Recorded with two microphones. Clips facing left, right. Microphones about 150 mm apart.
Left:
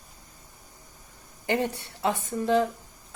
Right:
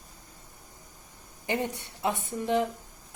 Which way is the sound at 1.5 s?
30° left (ahead or behind).